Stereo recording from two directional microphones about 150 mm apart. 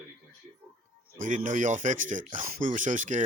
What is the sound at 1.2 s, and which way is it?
Speech, 60° right (ahead or behind).